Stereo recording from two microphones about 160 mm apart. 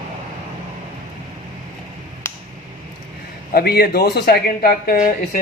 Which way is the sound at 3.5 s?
75° left (ahead or behind).